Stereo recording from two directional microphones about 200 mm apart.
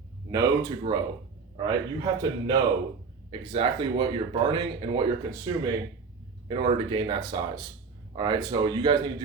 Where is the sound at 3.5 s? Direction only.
25° right (ahead or behind).